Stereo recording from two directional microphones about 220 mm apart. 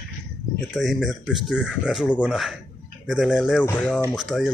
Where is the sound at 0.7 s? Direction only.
Centre (ahead or behind).